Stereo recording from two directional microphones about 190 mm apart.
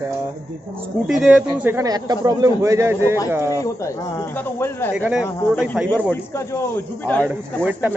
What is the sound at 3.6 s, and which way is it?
Speech, 15° left (ahead or behind).